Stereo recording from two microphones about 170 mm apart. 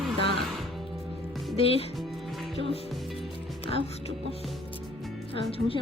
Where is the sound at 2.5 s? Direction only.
35° left (ahead or behind).